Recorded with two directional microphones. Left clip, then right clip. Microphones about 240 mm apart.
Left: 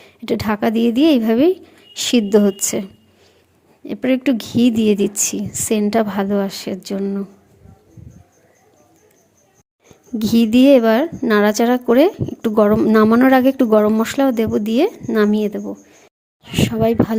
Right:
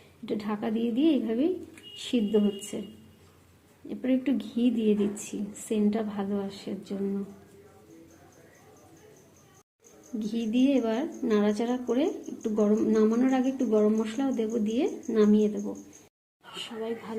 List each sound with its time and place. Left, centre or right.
0.3 s a woman's voice: left
3.8 s a woman's voice: left
10.2 s a woman's voice: left